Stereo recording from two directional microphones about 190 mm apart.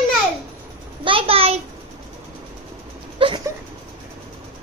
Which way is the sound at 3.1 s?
30° right (ahead or behind).